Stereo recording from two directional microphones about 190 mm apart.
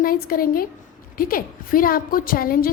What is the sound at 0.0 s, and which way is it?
A woman's voice, 50° left (ahead or behind).